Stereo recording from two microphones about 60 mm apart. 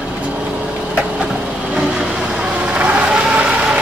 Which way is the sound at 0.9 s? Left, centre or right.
Centre.